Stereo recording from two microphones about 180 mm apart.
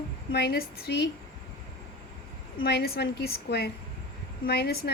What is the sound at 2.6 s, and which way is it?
A woman's voice, 60° left (ahead or behind).